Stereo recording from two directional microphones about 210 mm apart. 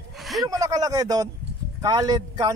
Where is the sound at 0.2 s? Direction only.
Centre (ahead or behind).